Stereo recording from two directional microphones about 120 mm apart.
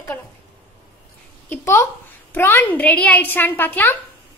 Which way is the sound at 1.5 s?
20° left (ahead or behind).